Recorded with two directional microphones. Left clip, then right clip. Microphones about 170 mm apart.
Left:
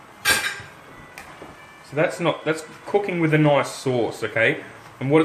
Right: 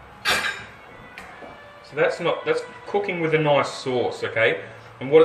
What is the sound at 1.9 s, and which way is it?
Speech, 45° left (ahead or behind).